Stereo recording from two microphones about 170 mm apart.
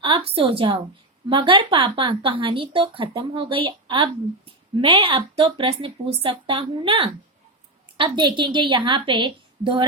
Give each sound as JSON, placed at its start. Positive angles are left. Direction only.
{"t": 0.0, "sound": "a woman's voice", "side_deg": -30}